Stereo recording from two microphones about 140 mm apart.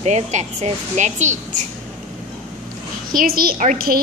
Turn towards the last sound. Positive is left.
turn(degrees=-80)